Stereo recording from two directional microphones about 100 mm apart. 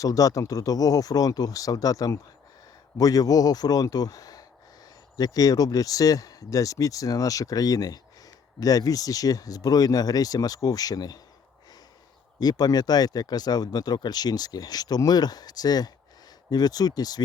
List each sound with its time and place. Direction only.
0.0 s speech: 35° left (ahead or behind)
12.4 s speech: 40° left (ahead or behind)